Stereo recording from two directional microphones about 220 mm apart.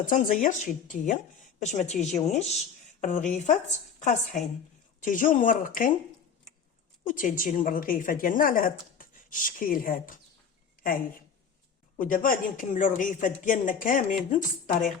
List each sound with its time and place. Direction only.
0.1 s speech: 35° left (ahead or behind)
7.1 s speech: 35° left (ahead or behind)
11.9 s speech: 40° left (ahead or behind)